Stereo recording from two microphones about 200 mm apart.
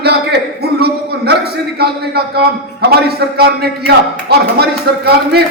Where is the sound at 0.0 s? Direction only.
55° right (ahead or behind).